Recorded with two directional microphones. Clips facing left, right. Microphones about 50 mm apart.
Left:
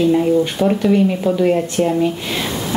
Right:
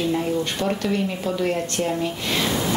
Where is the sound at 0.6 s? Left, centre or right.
Centre.